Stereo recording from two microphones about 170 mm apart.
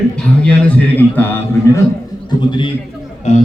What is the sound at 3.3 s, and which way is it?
Speech, 40° left (ahead or behind).